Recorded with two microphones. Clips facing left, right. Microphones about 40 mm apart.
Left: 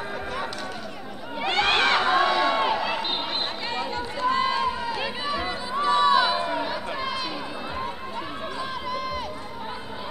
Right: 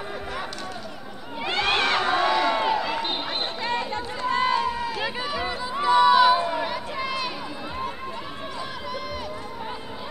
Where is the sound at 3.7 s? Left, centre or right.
Right.